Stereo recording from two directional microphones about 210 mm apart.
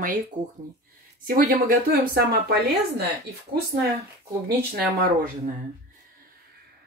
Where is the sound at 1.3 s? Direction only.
40° right (ahead or behind).